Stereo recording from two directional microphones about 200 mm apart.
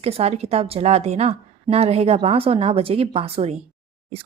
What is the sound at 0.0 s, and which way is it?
A woman's voice, 30° right (ahead or behind).